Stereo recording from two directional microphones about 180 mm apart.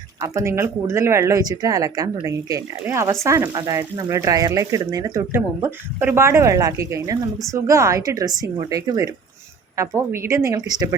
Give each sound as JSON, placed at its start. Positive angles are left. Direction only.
{"t": 0.2, "sound": "a woman's voice", "side_deg": -15}